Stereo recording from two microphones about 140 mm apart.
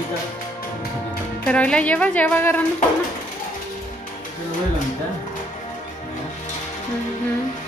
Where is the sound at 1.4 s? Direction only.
10° left (ahead or behind).